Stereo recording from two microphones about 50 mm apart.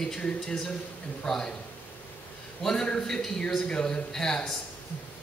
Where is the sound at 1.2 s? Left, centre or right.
Centre.